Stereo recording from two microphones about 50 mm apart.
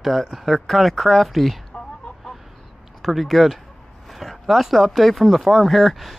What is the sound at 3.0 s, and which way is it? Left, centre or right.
Speech, centre.